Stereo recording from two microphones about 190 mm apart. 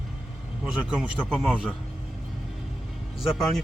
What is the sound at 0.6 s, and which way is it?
Speech, 5° right (ahead or behind).